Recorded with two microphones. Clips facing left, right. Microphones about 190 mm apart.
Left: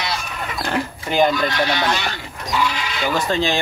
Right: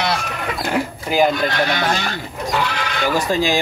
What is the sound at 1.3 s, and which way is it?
Speech, 45° right (ahead or behind).